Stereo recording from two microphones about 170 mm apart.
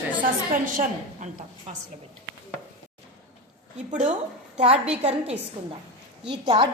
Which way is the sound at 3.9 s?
45° right (ahead or behind).